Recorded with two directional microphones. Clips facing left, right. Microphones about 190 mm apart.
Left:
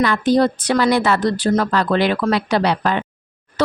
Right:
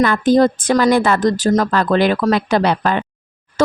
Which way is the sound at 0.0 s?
50° right (ahead or behind).